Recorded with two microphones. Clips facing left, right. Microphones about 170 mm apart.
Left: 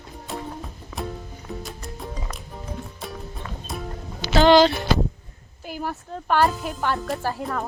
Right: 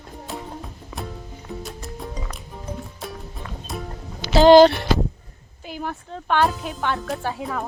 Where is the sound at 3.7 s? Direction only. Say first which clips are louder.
Right 1 dB; centre (ahead or behind).